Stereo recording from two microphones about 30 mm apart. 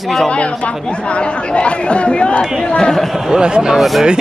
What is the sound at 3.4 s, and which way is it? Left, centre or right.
Speech, right.